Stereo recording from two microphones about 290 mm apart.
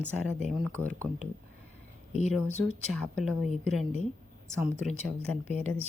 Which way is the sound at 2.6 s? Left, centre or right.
Centre.